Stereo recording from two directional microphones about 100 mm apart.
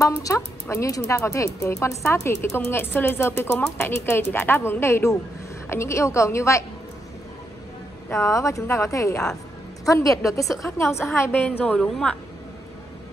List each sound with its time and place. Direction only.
0.2 s speech: 30° left (ahead or behind)
8.1 s speech: 30° left (ahead or behind)
11.2 s a woman's voice: 15° left (ahead or behind)